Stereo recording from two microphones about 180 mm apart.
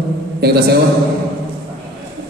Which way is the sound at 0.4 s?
65° right (ahead or behind).